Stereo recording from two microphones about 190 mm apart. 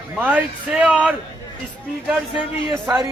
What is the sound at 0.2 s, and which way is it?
Speech, 10° right (ahead or behind).